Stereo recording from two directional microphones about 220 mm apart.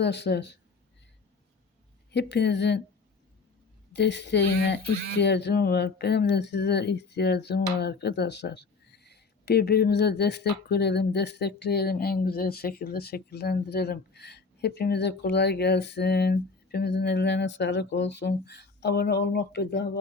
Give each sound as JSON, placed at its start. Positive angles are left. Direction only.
{"t": 0.0, "sound": "speech", "side_deg": 50}
{"t": 2.1, "sound": "speech", "side_deg": 50}
{"t": 3.9, "sound": "speech", "side_deg": 50}